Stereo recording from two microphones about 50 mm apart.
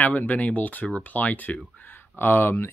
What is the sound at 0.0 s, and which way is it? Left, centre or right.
Speech, left.